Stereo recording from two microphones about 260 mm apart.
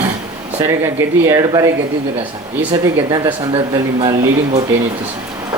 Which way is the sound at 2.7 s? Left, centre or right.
Centre.